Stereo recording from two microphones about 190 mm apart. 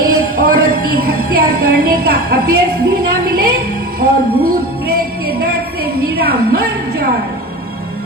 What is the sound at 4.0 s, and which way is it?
Music, 50° right (ahead or behind).